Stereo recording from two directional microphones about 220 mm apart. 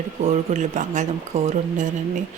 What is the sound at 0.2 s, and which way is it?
Speech, 30° right (ahead or behind).